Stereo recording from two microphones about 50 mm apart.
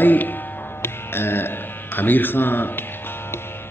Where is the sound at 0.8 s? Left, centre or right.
Left.